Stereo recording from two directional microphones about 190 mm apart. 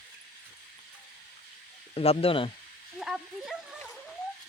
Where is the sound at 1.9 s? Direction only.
30° left (ahead or behind).